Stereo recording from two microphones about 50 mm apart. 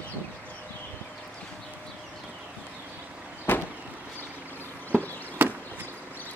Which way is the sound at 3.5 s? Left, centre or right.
Left.